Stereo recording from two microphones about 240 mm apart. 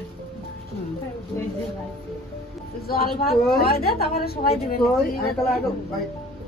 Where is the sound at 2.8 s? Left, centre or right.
Left.